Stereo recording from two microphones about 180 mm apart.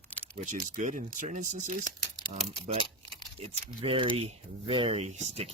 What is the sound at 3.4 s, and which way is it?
Speech, 30° right (ahead or behind).